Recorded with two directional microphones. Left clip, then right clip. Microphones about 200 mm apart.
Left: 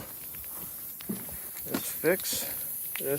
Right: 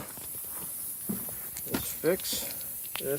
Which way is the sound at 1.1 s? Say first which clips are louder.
Even; 10° right (ahead or behind).